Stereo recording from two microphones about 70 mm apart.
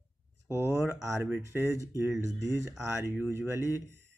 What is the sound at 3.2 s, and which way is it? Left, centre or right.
Speech, right.